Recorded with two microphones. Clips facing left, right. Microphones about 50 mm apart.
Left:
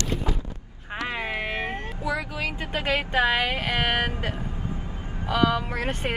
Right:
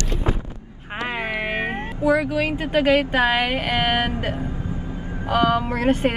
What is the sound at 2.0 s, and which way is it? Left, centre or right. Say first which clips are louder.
Speech: right 10 dB; right.